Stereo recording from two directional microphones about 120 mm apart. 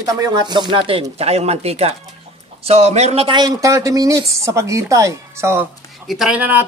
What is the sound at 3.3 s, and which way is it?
A woman's voice, 35° right (ahead or behind).